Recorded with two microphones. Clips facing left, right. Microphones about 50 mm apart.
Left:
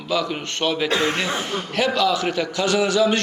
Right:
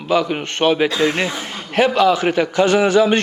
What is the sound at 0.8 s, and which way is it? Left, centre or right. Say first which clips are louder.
Speech: right 3 dB; left.